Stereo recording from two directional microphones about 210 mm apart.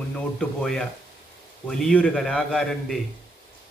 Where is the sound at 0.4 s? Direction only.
5° left (ahead or behind).